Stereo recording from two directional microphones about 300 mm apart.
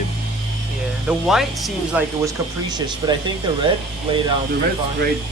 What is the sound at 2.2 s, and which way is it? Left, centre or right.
Speech, centre.